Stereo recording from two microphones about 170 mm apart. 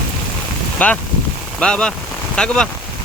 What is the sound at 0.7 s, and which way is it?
Speech, 10° left (ahead or behind).